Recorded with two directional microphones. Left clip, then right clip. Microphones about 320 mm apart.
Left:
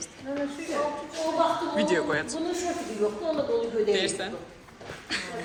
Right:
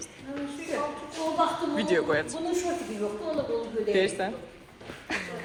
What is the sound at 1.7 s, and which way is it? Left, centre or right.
Speech, centre.